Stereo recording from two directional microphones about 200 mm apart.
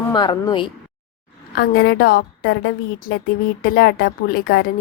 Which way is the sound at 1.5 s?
50° left (ahead or behind).